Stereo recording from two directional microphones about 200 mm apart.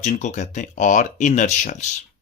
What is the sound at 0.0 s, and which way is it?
Speech, 35° left (ahead or behind).